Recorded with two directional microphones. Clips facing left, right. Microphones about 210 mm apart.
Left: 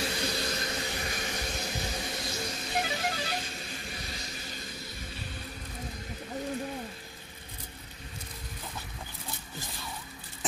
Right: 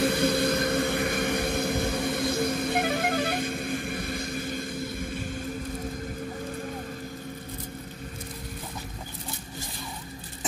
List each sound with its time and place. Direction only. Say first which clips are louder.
0.0 s vehicle: right 10 dB; 55° right (ahead or behind)